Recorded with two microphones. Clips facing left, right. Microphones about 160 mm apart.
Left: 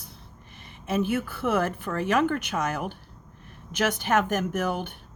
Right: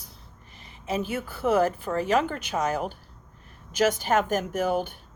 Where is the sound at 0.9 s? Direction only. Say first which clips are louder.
Left 4 dB; 55° left (ahead or behind).